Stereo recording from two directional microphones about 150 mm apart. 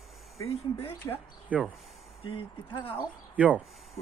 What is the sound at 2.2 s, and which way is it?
Speech, 35° left (ahead or behind).